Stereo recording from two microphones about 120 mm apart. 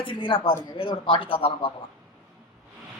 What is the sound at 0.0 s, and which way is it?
Speech, 45° left (ahead or behind).